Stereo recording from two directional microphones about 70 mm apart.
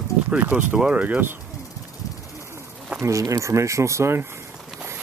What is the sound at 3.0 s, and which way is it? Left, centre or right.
Speech, right.